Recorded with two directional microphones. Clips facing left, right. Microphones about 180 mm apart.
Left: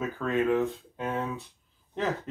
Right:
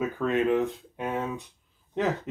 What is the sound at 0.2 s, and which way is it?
Speech, 20° right (ahead or behind).